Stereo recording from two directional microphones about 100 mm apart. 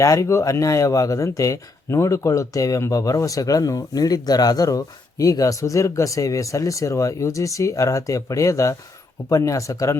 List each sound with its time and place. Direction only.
0.0 s speech: 30° left (ahead or behind)